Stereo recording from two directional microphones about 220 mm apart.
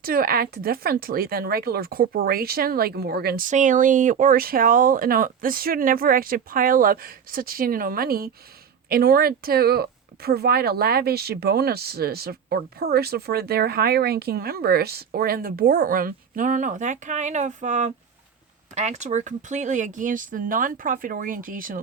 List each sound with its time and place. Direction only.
0.0 s speech: 40° right (ahead or behind)